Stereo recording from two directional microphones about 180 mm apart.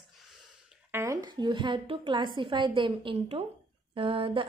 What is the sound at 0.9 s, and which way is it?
A woman's voice, 15° right (ahead or behind).